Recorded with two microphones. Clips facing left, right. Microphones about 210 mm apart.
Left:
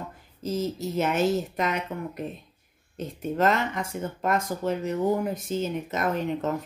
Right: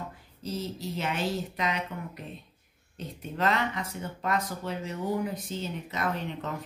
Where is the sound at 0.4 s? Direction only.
45° left (ahead or behind).